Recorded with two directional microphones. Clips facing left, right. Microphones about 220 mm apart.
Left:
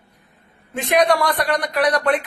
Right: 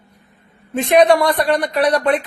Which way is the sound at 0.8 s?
25° right (ahead or behind).